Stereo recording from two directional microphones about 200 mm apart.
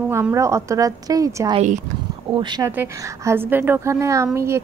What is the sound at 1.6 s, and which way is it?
Speech, 35° right (ahead or behind).